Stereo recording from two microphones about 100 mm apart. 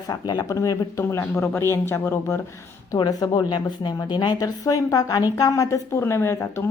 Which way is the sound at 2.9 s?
40° left (ahead or behind).